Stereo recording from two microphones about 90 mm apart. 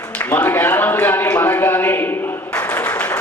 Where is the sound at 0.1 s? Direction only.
20° left (ahead or behind).